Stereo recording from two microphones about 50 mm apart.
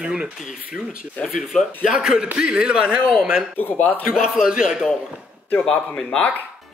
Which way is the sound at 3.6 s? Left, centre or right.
Left.